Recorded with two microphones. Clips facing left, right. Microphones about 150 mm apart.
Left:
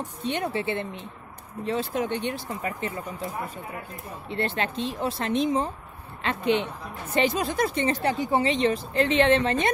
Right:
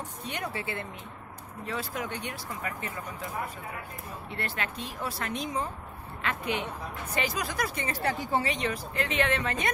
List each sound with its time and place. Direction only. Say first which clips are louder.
0.2 s speech: left 8 dB; 25° left (ahead or behind)
4.3 s speech: left 8 dB; 25° left (ahead or behind)